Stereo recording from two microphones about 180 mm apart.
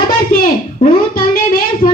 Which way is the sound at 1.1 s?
55° left (ahead or behind).